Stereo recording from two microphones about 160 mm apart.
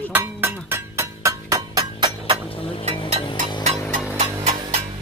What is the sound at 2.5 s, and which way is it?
Music, 35° left (ahead or behind).